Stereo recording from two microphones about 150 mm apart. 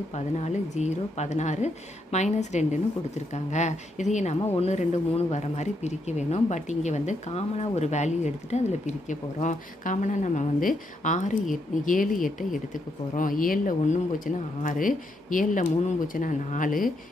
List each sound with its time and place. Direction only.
0.1 s speech: 50° left (ahead or behind)